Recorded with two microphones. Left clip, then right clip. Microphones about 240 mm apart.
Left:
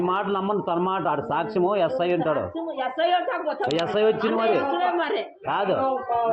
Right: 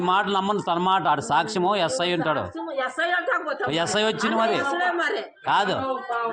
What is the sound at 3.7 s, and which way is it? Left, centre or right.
Speech, right.